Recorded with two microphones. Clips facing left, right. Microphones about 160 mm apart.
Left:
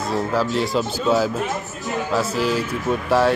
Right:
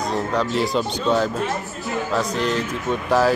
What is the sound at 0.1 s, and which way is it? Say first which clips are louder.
Speech: left 3 dB; 5° left (ahead or behind).